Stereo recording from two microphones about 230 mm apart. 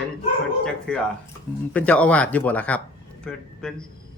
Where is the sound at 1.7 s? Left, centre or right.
Centre.